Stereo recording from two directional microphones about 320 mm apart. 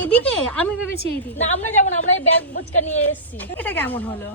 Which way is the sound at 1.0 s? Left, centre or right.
Left.